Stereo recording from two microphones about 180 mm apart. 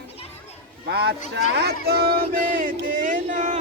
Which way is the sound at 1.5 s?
65° right (ahead or behind).